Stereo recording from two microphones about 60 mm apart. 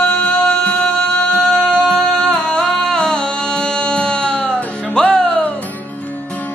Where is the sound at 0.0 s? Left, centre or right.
Left.